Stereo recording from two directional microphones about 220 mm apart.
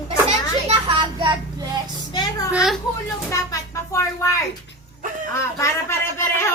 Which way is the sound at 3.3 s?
15° left (ahead or behind).